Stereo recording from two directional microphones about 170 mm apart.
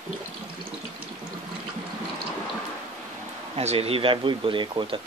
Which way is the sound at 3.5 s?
35° right (ahead or behind).